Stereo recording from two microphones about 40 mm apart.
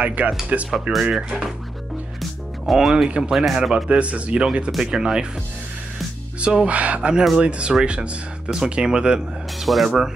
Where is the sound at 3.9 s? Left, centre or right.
Right.